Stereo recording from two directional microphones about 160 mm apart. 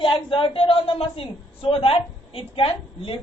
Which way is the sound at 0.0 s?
35° left (ahead or behind).